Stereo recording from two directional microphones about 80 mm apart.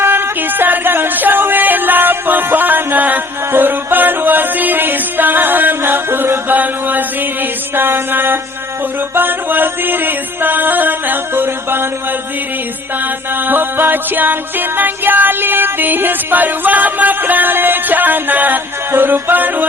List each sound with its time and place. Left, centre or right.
0.0 s music: right
13.5 s music: right